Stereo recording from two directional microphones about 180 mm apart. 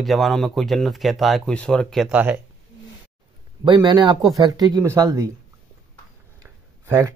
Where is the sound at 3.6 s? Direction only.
25° right (ahead or behind).